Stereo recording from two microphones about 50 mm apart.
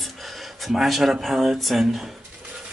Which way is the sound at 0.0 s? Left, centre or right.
Centre.